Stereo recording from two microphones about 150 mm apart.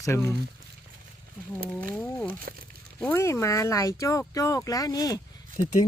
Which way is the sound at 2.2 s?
75° right (ahead or behind).